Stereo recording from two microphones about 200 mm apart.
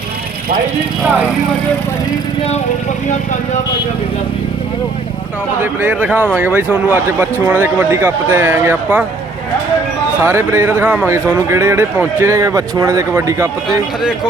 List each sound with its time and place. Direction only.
5.5 s speech: 10° right (ahead or behind)
10.2 s speech: 10° right (ahead or behind)